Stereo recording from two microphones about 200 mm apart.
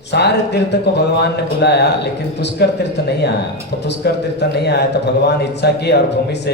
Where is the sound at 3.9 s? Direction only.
55° left (ahead or behind).